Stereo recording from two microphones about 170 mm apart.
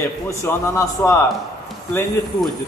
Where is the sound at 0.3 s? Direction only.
15° left (ahead or behind).